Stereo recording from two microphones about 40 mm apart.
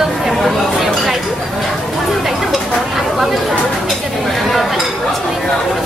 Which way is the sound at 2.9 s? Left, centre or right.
Centre.